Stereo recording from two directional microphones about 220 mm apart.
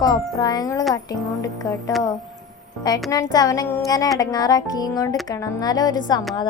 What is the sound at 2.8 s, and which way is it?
A woman's voice, 15° left (ahead or behind).